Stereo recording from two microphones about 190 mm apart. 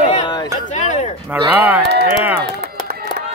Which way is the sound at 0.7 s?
40° left (ahead or behind).